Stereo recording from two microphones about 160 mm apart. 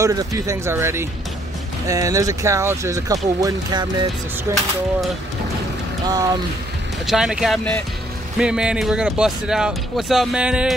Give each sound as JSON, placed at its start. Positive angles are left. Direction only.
{"t": 0.0, "sound": "speech", "side_deg": -20}
{"t": 7.1, "sound": "speech", "side_deg": -5}